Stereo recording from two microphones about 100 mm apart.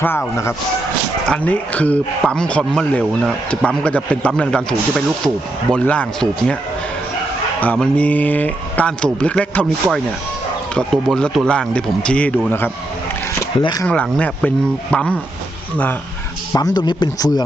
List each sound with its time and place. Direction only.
0.0 s speech: 20° left (ahead or behind)
1.3 s speech: 15° left (ahead or behind)
7.6 s speech: 15° left (ahead or behind)
12.5 s speech: 20° left (ahead or behind)
13.6 s speech: 45° left (ahead or behind)
13.8 s speech: 15° left (ahead or behind)
16.6 s speech: 45° left (ahead or behind)